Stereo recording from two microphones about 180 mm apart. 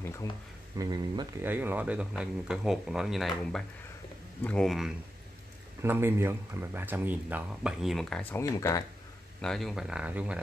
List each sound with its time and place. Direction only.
0.0 s a sound: 15° left (ahead or behind)
0.7 s speech: 20° right (ahead or behind)
1.4 s speech: 10° right (ahead or behind)
5.8 s speech: 15° right (ahead or behind); by 8.8 s 15° left (ahead or behind)
9.4 s speech: centre (ahead or behind)